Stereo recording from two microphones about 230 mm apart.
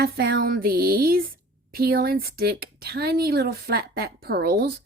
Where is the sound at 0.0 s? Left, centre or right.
Right.